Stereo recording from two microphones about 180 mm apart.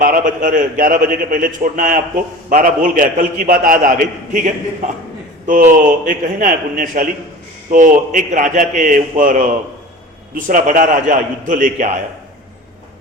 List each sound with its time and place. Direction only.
0.0 s a man's voice: 50° right (ahead or behind)